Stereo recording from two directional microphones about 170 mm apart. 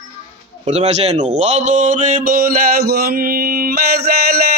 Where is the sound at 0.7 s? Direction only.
40° right (ahead or behind).